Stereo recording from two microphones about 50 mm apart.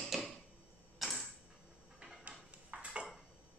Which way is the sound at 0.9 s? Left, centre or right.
Centre.